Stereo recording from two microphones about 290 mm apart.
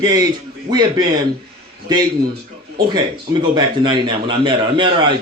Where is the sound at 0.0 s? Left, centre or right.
Centre.